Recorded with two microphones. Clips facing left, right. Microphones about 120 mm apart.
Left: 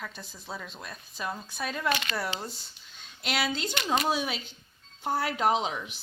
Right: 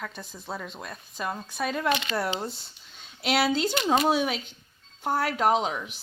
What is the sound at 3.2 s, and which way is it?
Speech, 70° right (ahead or behind).